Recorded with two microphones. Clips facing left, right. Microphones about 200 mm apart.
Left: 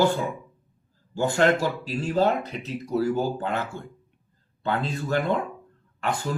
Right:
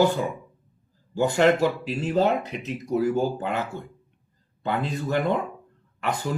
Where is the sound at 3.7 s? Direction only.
45° right (ahead or behind).